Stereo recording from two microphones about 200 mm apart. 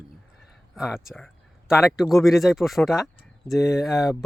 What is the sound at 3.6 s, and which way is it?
Speech, 15° left (ahead or behind).